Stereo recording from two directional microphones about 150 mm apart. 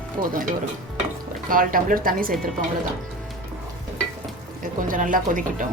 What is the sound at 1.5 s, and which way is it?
Speech, 70° right (ahead or behind).